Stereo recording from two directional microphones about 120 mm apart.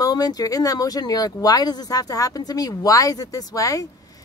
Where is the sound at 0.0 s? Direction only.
30° left (ahead or behind).